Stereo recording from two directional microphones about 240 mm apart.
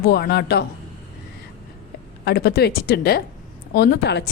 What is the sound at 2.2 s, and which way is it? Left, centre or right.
A woman's voice, left.